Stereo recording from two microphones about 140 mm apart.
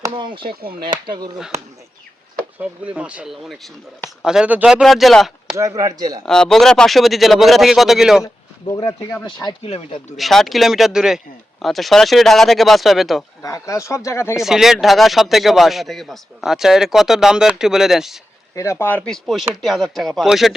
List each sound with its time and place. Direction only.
0.1 s speech: 35° right (ahead or behind)
0.4 s speech: 90° right
1.0 s speech: 35° right (ahead or behind)
2.6 s speech: 10° right (ahead or behind)
5.5 s speech: 25° right (ahead or behind)
6.2 s speech: 5° left (ahead or behind)
8.6 s speech: 25° left (ahead or behind)
9.6 s speech: 45° left (ahead or behind)
10.2 s speech: centre (ahead or behind)
13.4 s speech: 20° left (ahead or behind)
14.3 s speech: 5° right (ahead or behind)
18.5 s speech: 20° left (ahead or behind); by 20.5 s centre (ahead or behind)